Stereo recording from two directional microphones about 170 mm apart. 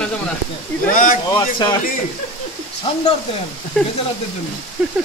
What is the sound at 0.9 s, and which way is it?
Speech, 55° left (ahead or behind).